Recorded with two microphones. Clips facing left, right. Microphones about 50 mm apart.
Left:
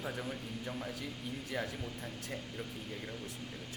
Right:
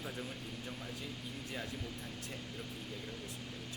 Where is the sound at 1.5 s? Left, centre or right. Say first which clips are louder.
Left 6 dB; left.